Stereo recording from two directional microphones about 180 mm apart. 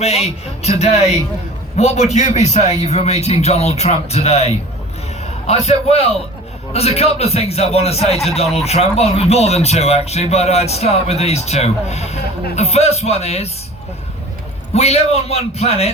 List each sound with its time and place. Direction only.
0.0 s speech: 35° left (ahead or behind)
1.7 s speech: 35° left (ahead or behind)
14.7 s speech: 35° left (ahead or behind)